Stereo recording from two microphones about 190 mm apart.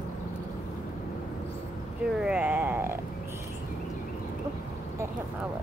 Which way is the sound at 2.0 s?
5° right (ahead or behind).